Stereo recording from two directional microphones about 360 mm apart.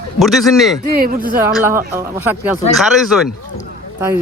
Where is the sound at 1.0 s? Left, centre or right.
Right.